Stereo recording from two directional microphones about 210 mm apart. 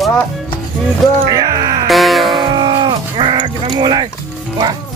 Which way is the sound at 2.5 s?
20° right (ahead or behind).